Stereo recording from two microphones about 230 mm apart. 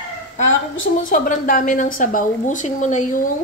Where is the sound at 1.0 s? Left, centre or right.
Left.